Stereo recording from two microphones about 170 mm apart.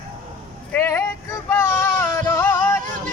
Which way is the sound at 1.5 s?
15° left (ahead or behind).